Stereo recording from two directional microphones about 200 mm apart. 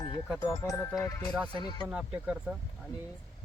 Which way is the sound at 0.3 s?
15° left (ahead or behind).